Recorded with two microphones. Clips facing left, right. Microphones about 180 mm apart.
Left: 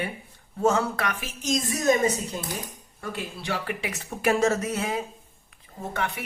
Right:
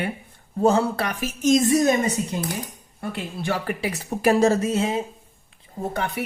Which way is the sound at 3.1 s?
50° right (ahead or behind).